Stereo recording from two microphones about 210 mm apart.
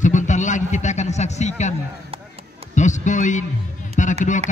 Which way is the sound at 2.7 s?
35° left (ahead or behind).